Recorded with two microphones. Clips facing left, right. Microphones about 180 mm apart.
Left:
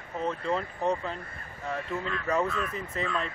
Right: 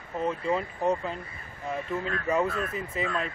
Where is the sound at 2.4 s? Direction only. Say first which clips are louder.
Right 1 dB; 45° right (ahead or behind).